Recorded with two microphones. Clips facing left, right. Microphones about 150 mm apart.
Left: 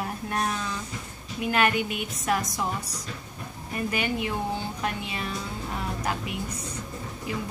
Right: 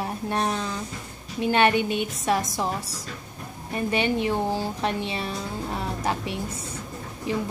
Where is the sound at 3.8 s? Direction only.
30° right (ahead or behind).